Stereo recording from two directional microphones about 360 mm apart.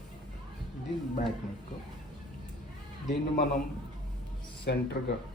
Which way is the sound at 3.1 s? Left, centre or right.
Left.